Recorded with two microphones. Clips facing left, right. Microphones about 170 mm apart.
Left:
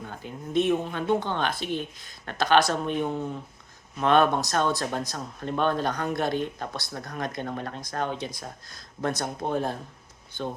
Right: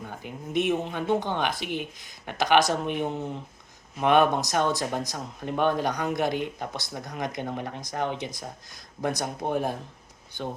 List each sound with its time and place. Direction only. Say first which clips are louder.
0.1 s speech: left 2 dB; 15° right (ahead or behind)